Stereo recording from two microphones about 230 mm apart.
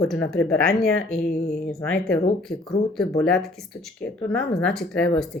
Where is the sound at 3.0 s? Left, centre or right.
Centre.